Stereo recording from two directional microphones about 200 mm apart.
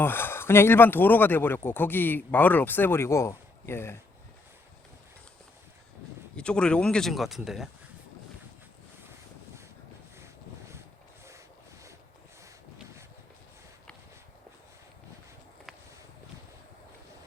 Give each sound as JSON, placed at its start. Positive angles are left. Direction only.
{"t": 0.0, "sound": "speech", "side_deg": 10}
{"t": 6.3, "sound": "speech", "side_deg": 5}